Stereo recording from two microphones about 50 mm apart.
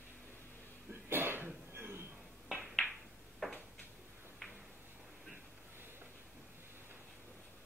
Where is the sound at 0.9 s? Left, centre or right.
Right.